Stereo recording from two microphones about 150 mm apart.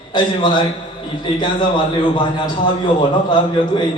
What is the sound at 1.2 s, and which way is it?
Speech, 30° left (ahead or behind).